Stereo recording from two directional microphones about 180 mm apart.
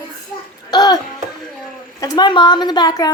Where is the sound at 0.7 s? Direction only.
20° left (ahead or behind).